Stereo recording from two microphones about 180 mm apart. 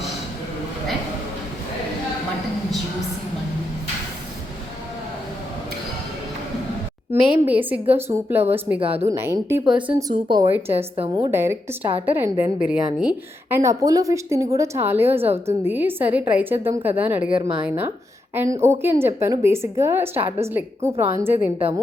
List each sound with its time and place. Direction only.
7.1 s a woman's voice: 10° right (ahead or behind)
10.1 s speech: 25° right (ahead or behind)
10.5 s a woman's voice: 10° right (ahead or behind)
10.9 s speech: 30° right (ahead or behind)
11.3 s a woman's voice: 15° right (ahead or behind)
13.6 s a woman's voice: 15° right (ahead or behind)